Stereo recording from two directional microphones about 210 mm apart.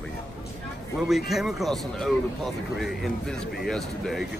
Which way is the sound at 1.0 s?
Centre (ahead or behind).